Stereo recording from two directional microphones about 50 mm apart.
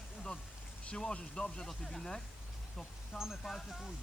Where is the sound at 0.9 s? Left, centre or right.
Left.